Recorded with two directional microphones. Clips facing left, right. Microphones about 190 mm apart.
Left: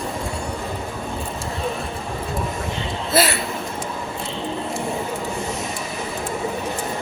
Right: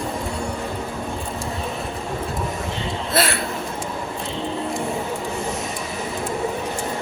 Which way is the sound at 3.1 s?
Centre (ahead or behind).